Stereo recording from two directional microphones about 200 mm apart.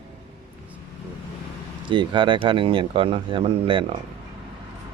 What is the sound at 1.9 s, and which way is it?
Speech, 25° right (ahead or behind).